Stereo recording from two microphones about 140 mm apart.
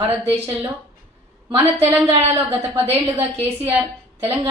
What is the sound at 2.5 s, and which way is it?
A woman's voice, 15° right (ahead or behind).